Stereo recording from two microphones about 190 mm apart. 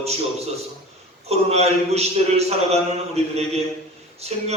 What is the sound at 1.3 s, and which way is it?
A man's voice, 35° right (ahead or behind).